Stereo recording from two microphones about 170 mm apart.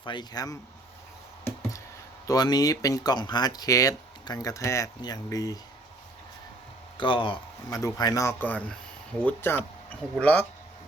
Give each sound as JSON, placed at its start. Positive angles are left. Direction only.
{"t": 0.0, "sound": "speech", "side_deg": 25}
{"t": 2.2, "sound": "speech", "side_deg": 20}
{"t": 6.9, "sound": "speech", "side_deg": 30}